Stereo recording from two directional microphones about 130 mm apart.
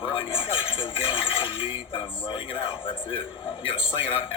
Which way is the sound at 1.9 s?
40° left (ahead or behind).